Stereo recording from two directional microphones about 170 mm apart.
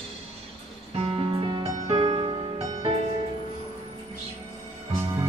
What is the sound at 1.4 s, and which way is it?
Music, 30° right (ahead or behind).